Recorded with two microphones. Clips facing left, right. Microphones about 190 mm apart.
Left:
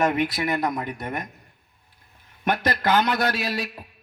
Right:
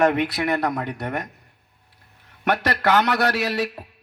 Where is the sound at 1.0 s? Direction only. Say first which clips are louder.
Right 3 dB; 70° right (ahead or behind).